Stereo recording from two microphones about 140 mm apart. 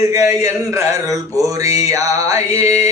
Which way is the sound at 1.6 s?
25° right (ahead or behind).